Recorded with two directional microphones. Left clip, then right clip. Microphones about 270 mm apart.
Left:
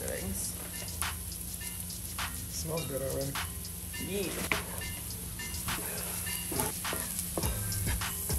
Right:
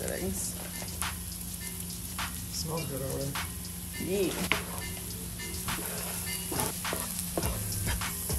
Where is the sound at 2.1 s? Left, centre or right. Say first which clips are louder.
Right 2 dB; centre.